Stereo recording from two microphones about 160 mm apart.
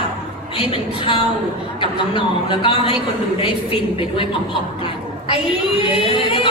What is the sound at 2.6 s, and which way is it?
Speech, 35° left (ahead or behind).